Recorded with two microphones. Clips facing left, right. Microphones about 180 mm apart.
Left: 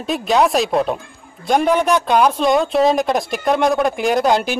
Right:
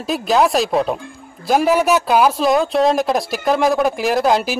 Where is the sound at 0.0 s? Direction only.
Centre (ahead or behind).